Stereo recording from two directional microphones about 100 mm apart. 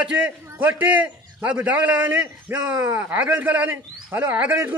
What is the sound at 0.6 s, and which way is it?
A man's voice, 15° right (ahead or behind).